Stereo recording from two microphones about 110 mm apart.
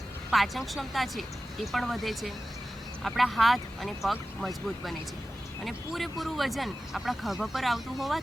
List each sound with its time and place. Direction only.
0.3 s speech: centre (ahead or behind)